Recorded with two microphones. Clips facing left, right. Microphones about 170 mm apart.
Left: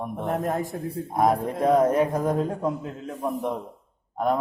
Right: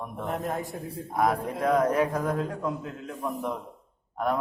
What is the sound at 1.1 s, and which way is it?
A man's voice, 25° left (ahead or behind).